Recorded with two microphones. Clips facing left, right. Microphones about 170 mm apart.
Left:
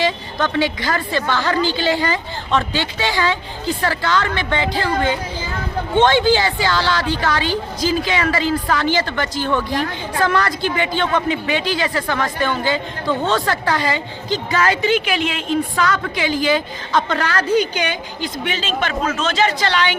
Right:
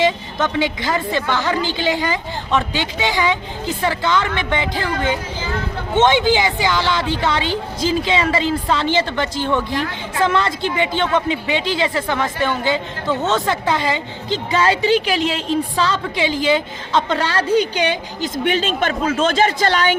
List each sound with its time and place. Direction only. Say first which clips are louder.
0.0 s a woman's voice: right 2 dB; 20° right (ahead or behind)
18.2 s a woman's voice: right 6 dB; 50° right (ahead or behind)